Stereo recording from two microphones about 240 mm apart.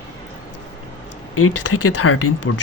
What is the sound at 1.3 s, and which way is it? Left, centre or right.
Speech, left.